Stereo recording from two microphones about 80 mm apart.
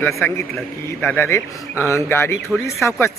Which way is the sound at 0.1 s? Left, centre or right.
Left.